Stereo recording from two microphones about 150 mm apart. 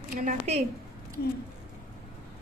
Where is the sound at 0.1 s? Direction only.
60° right (ahead or behind).